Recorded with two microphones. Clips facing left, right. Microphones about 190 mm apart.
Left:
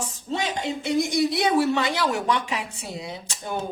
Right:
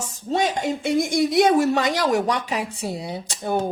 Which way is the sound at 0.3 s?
45° right (ahead or behind).